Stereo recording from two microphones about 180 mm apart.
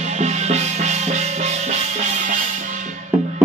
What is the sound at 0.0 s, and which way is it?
Music, 40° right (ahead or behind).